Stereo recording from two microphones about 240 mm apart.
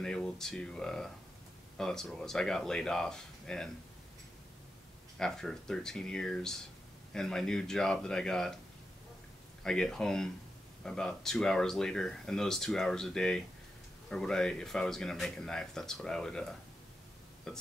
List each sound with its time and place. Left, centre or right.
0.0 s speech: centre
5.2 s speech: centre
9.6 s speech: centre